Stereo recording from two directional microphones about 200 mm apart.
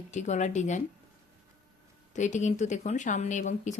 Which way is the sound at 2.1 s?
35° left (ahead or behind).